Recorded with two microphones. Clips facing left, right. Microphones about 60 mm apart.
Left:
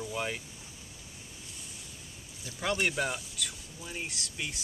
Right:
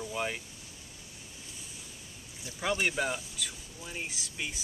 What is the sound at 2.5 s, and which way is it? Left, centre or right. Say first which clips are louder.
Speech: even; centre.